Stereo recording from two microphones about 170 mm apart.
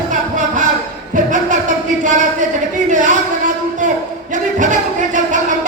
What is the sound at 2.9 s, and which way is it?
Speech, 45° right (ahead or behind).